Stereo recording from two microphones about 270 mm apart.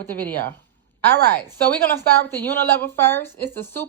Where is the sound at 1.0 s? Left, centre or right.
Right.